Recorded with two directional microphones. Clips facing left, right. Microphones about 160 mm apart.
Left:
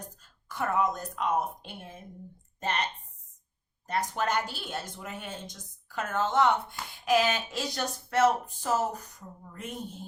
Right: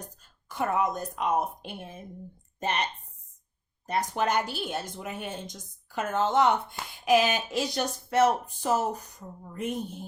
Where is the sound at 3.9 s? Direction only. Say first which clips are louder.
Right 2 dB; 15° right (ahead or behind).